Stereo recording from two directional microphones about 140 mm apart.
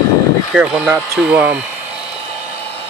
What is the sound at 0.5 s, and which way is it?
Speech, 5° right (ahead or behind).